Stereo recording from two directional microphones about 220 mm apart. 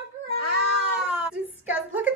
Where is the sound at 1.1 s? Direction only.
5° right (ahead or behind).